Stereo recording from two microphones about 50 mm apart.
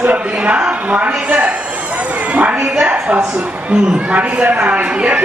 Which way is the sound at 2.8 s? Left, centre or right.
Right.